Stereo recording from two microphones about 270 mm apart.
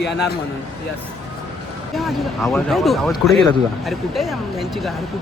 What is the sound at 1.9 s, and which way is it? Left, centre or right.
Speech, centre.